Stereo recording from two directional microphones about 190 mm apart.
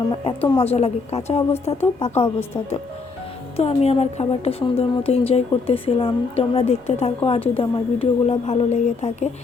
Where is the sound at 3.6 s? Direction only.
30° left (ahead or behind).